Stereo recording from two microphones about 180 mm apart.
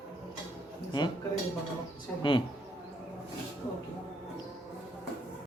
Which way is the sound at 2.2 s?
25° left (ahead or behind).